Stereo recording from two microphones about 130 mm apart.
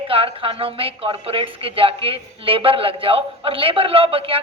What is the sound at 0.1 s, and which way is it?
A woman's voice, 45° right (ahead or behind).